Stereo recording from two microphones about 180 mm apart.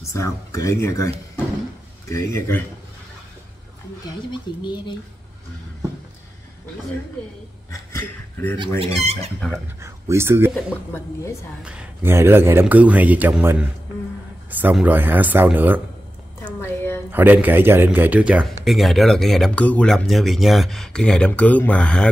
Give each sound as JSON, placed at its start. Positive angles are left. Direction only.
{"t": 0.1, "sound": "speech", "side_deg": 15}
{"t": 4.3, "sound": "speech", "side_deg": 25}
{"t": 7.9, "sound": "speech", "side_deg": 10}
{"t": 8.5, "sound": "speech", "side_deg": -30}
{"t": 9.8, "sound": "speech", "side_deg": -15}
{"t": 10.5, "sound": "speech", "side_deg": 10}
{"t": 11.6, "sound": "a man's voice", "side_deg": -5}
{"t": 16.4, "sound": "a sound", "side_deg": 10}
{"t": 17.1, "sound": "a man's voice", "side_deg": -10}